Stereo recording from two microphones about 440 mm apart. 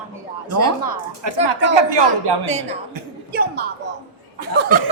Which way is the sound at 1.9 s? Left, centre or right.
Right.